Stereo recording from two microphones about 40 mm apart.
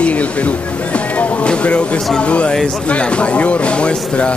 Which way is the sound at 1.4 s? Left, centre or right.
Left.